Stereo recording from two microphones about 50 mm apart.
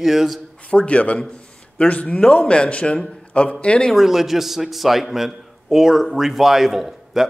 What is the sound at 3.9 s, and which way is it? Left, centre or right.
A man's voice, centre.